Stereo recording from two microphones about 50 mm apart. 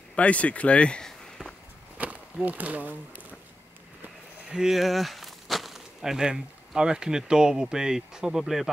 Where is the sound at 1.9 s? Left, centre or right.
Right.